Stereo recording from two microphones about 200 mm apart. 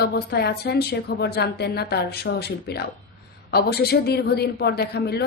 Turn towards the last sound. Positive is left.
turn(degrees=55)  # may be behind; listen again after turning